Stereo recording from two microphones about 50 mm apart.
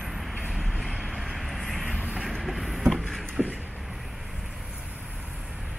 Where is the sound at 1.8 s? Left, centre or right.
Right.